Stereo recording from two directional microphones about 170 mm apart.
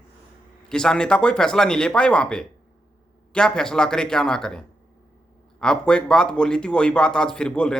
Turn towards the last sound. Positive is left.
turn(degrees=5)  # may be behind; listen again after turning